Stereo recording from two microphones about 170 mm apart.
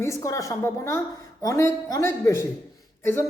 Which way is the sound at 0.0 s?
20° left (ahead or behind).